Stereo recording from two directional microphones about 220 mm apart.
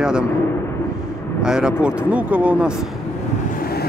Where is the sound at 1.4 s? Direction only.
5° right (ahead or behind).